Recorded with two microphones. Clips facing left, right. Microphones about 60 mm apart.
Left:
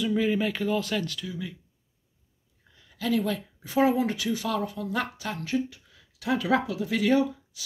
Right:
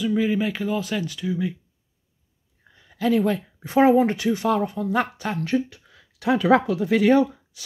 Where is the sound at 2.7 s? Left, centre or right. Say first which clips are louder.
Right 6 dB; right.